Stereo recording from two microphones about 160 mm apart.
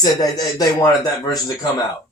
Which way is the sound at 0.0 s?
25° left (ahead or behind).